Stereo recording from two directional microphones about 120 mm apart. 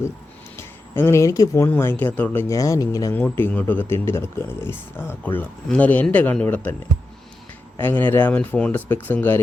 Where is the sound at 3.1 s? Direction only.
15° left (ahead or behind).